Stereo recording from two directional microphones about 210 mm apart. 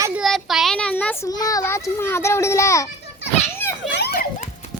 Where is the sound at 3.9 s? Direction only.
50° left (ahead or behind).